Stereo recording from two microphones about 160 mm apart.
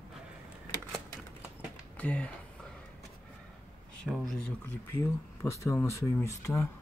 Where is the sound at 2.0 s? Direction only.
10° left (ahead or behind).